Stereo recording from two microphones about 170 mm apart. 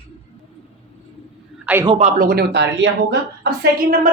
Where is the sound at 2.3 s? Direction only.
80° right.